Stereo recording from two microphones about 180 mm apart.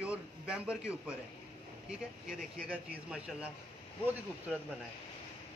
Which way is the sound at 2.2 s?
50° right (ahead or behind).